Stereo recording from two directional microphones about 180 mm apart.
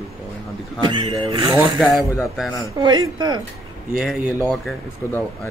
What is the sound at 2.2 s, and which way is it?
Speech, centre (ahead or behind).